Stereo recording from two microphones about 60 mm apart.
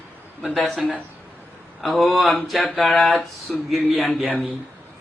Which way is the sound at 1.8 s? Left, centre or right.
Centre.